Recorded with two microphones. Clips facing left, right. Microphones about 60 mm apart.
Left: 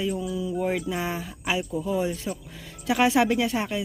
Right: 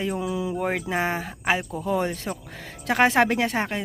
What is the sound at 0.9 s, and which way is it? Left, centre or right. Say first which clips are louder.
Speech: right 4 dB; right.